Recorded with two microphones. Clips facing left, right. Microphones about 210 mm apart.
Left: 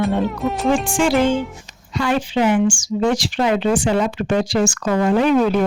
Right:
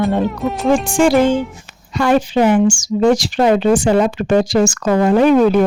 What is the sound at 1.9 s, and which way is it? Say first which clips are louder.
Speech: right 5 dB; 45° right (ahead or behind).